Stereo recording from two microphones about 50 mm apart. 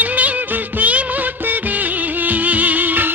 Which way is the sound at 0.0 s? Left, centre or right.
Right.